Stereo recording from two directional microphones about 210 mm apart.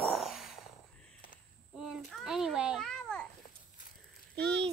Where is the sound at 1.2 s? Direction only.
40° left (ahead or behind).